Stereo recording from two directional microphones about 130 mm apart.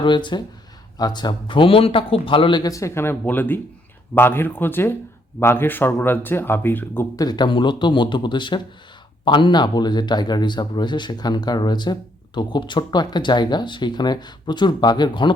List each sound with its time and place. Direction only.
0.0 s a man's voice: 35° left (ahead or behind); by 7.1 s 15° left (ahead or behind)
7.2 s a man's voice: 35° left (ahead or behind)